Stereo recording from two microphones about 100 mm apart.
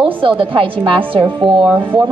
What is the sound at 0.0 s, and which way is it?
A woman's voice, 60° right (ahead or behind).